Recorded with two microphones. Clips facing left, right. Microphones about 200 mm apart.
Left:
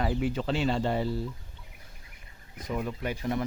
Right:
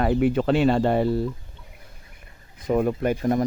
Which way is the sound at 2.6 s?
55° right (ahead or behind).